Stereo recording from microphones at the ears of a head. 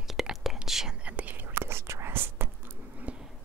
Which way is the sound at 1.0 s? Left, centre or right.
Right.